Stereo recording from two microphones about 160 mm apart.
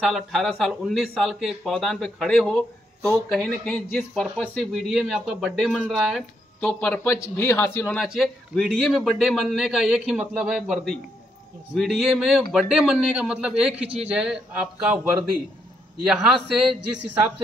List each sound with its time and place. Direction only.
0.1 s a man's voice: centre (ahead or behind)
6.7 s speech: 15° left (ahead or behind)
8.0 s a man's voice: centre (ahead or behind)